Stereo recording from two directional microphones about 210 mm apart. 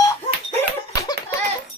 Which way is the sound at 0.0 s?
15° left (ahead or behind).